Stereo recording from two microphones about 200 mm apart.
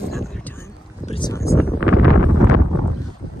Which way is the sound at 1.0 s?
30° left (ahead or behind).